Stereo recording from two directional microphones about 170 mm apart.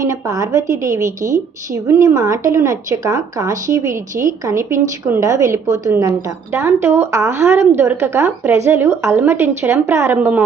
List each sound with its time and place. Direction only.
0.0 s a woman's voice: 20° right (ahead or behind)